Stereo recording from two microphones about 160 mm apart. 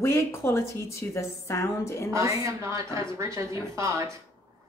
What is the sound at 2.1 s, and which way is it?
A woman's voice, 20° right (ahead or behind).